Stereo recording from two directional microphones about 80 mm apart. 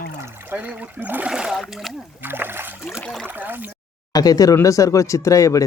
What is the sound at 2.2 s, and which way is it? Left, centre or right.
Speech, right.